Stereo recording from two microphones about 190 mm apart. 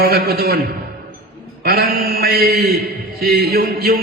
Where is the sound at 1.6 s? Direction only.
55° right (ahead or behind).